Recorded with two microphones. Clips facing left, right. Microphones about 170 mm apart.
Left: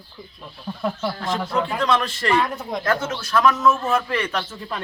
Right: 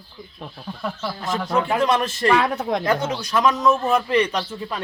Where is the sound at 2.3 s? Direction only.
70° right (ahead or behind).